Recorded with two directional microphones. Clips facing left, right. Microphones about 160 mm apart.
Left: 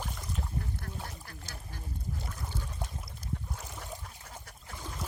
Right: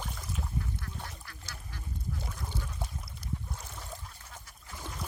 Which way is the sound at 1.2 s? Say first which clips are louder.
Left 2 dB; 45° left (ahead or behind).